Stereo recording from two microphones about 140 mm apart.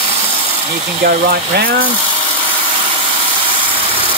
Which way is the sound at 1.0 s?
90° right.